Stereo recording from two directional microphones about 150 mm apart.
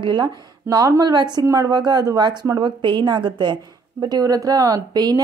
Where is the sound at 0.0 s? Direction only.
30° right (ahead or behind).